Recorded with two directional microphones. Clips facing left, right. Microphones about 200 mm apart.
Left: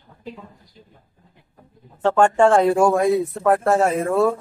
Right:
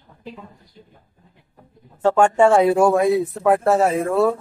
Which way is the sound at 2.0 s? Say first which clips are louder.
Right 1 dB; 10° right (ahead or behind).